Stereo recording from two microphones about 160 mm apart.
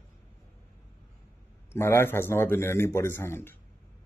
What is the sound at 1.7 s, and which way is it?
Speech, 15° left (ahead or behind).